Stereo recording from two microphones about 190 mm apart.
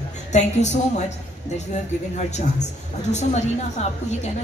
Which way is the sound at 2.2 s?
35° left (ahead or behind).